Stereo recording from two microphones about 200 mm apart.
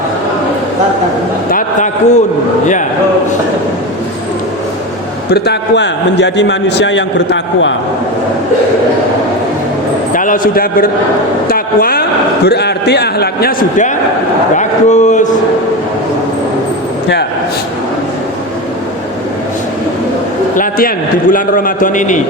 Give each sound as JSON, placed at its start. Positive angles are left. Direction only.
{"t": 1.5, "sound": "a man's voice", "side_deg": 40}
{"t": 5.3, "sound": "a man's voice", "side_deg": 60}
{"t": 10.1, "sound": "a man's voice", "side_deg": 40}
{"t": 11.4, "sound": "a sound", "side_deg": 45}
{"t": 12.5, "sound": "a man's voice", "side_deg": 55}
{"t": 20.6, "sound": "a man's voice", "side_deg": 45}